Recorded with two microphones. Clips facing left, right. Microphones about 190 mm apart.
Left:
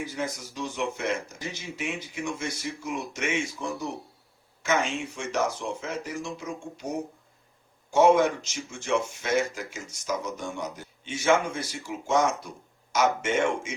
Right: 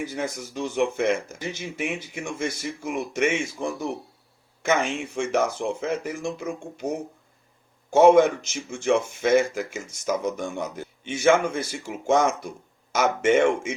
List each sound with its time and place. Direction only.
0.0 s speech: 55° right (ahead or behind)
7.9 s speech: 55° right (ahead or behind)